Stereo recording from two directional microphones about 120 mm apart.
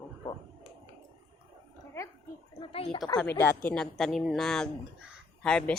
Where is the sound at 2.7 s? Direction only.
50° left (ahead or behind).